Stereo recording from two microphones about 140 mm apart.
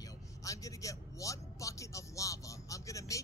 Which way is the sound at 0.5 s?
25° left (ahead or behind).